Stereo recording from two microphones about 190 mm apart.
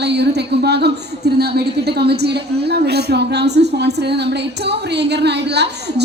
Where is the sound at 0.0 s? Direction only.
60° right (ahead or behind).